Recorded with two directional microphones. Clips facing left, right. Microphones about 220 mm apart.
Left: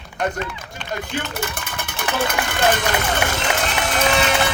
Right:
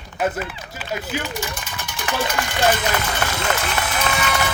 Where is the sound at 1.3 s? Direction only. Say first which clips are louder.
Left 1 dB; 55° left (ahead or behind).